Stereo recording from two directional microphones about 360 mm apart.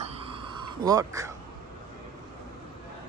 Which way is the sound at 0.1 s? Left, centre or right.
Centre.